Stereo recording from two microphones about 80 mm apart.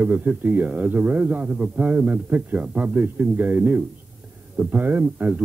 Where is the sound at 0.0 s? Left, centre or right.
Right.